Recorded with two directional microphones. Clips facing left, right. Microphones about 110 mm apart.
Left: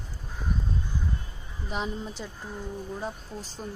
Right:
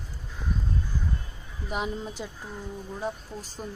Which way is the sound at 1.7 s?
10° right (ahead or behind).